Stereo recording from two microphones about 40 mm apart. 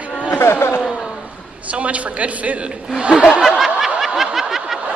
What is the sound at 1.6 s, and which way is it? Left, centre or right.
A woman's voice, right.